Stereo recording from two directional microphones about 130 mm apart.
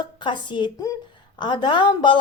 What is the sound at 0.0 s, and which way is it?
A woman's voice, 35° left (ahead or behind).